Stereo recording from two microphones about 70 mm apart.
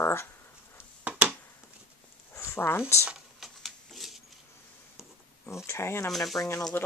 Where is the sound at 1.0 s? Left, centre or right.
Centre.